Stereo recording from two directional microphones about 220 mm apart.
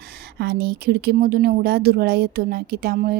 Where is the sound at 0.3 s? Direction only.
50° right (ahead or behind).